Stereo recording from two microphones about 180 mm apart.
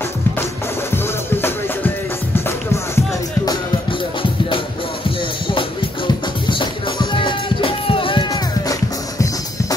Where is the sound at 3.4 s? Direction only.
25° left (ahead or behind).